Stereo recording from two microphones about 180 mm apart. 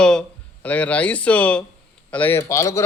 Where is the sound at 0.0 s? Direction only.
5° left (ahead or behind).